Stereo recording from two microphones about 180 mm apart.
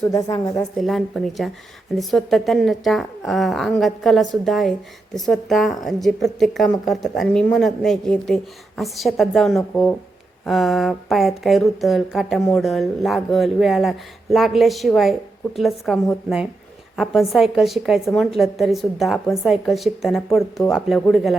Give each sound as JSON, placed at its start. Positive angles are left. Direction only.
{"t": 0.1, "sound": "a woman's voice", "side_deg": 20}
{"t": 0.8, "sound": "a woman's voice", "side_deg": 0}
{"t": 17.0, "sound": "a woman's voice", "side_deg": 0}